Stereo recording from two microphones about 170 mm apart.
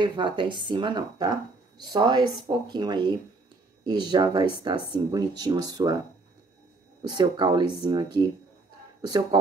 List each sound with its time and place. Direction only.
0.0 s speech: 25° right (ahead or behind)